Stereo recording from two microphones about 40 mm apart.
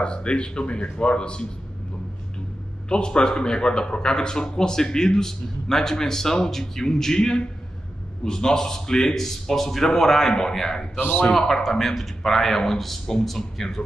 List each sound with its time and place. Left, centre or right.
0.0 s speech: left
2.9 s speech: left
11.0 s a man's voice: left
11.3 s speech: centre